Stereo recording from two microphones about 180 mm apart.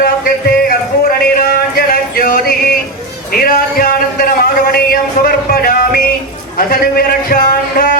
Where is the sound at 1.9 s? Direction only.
50° left (ahead or behind).